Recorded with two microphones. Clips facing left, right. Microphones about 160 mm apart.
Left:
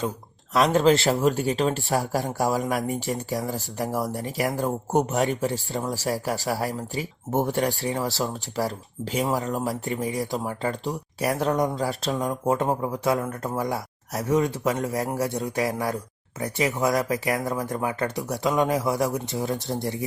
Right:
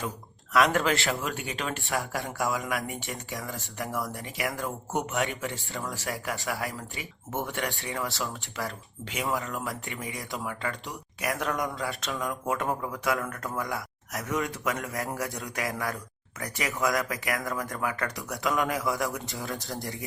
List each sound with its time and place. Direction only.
0.5 s speech: 25° left (ahead or behind)
1.0 s speech: 40° left (ahead or behind)
11.8 s speech: 40° left (ahead or behind)
12.5 s speech: 25° left (ahead or behind)